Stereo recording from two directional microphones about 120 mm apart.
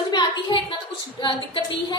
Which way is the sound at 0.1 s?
40° left (ahead or behind).